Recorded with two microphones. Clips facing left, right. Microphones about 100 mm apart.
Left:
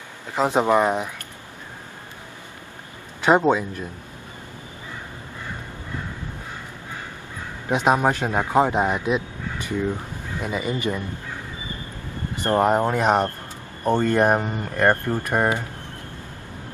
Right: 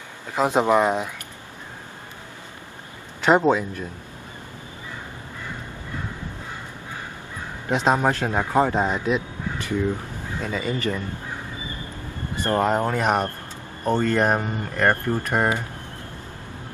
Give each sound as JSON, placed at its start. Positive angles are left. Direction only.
{"t": 0.7, "sound": "speech", "side_deg": 10}
{"t": 3.2, "sound": "a man's voice", "side_deg": 5}
{"t": 7.7, "sound": "speech", "side_deg": 15}
{"t": 12.4, "sound": "speech", "side_deg": 20}